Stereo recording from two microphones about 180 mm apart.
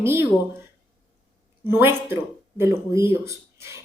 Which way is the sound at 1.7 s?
10° right (ahead or behind).